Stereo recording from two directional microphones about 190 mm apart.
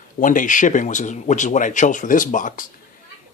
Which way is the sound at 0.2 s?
45° left (ahead or behind).